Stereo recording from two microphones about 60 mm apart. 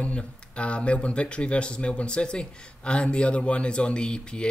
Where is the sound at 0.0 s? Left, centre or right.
Centre.